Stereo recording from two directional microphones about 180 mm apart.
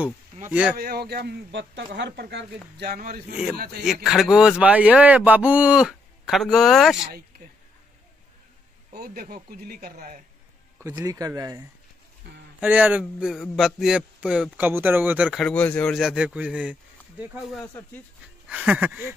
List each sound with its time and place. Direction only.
0.5 s a sound: 5° right (ahead or behind)
0.7 s speech: 60° right (ahead or behind)
2.9 s speech: 50° right (ahead or behind)
3.8 s a man's voice: centre (ahead or behind)
8.9 s speech: 55° right (ahead or behind)
10.8 s speech: 15° right (ahead or behind)
12.5 s a sound: 10° right (ahead or behind)
13.0 s a man's voice: centre (ahead or behind)
18.5 s a sound: 10° right (ahead or behind)